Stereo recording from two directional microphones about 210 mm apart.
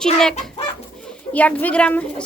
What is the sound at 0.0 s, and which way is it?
A woman's voice, 5° left (ahead or behind).